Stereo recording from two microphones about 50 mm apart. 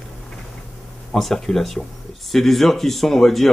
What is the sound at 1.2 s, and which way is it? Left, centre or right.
Speech, centre.